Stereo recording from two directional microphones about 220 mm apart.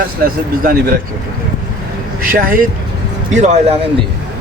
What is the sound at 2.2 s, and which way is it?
Speech, 40° right (ahead or behind).